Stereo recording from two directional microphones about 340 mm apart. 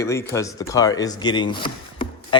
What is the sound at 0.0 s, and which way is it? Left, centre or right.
Speech, centre.